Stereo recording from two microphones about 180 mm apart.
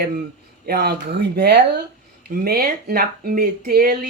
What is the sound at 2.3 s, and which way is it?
Speech, 55° right (ahead or behind).